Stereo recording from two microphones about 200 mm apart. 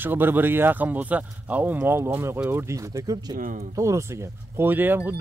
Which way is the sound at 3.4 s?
40° right (ahead or behind).